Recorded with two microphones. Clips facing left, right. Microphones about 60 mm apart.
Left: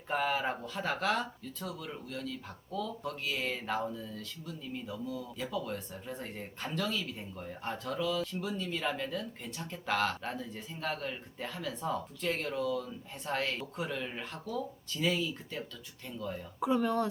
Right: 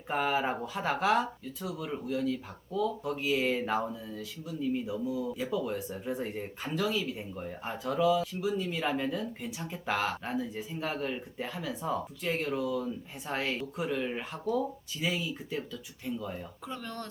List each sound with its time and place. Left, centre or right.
0.1 s speech: centre
16.6 s speech: centre